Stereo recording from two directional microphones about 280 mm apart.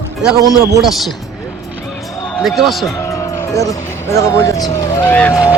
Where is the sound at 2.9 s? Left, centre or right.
Centre.